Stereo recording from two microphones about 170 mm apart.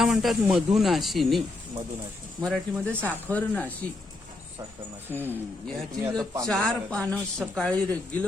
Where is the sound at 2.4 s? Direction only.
5° left (ahead or behind).